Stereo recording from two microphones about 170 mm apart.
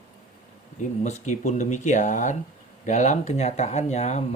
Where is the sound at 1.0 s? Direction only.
45° left (ahead or behind).